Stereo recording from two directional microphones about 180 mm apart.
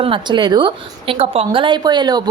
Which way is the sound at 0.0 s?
25° right (ahead or behind).